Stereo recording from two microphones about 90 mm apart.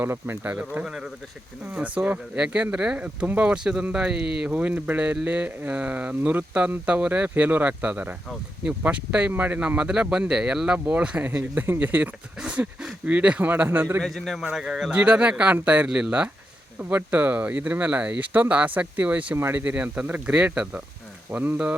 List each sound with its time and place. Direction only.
0.0 s speech: 25° right (ahead or behind)
14.0 s a man's voice: centre (ahead or behind); by 19.6 s 25° right (ahead or behind)
19.6 s speech: 15° right (ahead or behind)
21.2 s speech: 20° right (ahead or behind)